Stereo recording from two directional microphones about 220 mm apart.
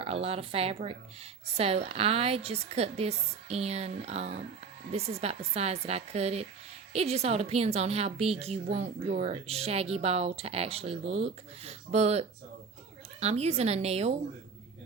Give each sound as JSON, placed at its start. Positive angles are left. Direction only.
{"t": 0.0, "sound": "a woman's voice", "side_deg": -25}